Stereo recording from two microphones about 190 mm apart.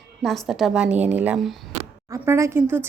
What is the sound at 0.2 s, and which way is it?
A woman's voice, centre (ahead or behind).